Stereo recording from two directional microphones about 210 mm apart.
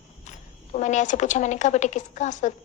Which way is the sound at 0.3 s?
35° left (ahead or behind).